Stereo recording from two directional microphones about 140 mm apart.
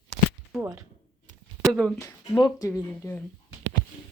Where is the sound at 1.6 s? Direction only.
5° left (ahead or behind).